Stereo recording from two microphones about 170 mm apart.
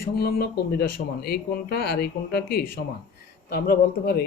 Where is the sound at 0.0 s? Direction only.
65° left (ahead or behind).